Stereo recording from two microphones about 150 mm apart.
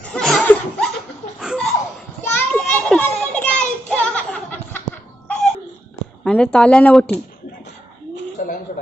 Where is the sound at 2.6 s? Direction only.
5° left (ahead or behind).